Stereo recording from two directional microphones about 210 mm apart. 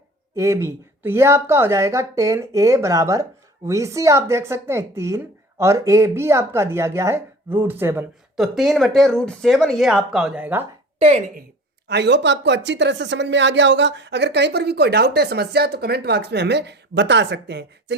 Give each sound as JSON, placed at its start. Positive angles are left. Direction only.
{"t": 0.3, "sound": "speech", "side_deg": -15}
{"t": 11.0, "sound": "a woman's voice", "side_deg": -30}
{"t": 11.9, "sound": "speech", "side_deg": -55}